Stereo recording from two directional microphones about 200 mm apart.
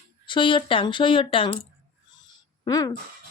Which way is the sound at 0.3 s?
25° left (ahead or behind).